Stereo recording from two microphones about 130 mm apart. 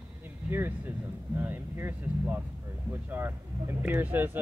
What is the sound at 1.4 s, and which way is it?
Speech, 15° right (ahead or behind).